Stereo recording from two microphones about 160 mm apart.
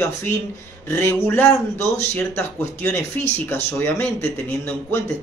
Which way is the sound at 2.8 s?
15° left (ahead or behind).